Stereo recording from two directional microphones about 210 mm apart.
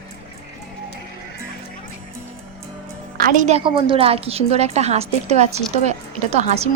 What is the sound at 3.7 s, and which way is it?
A woman's voice, 25° right (ahead or behind).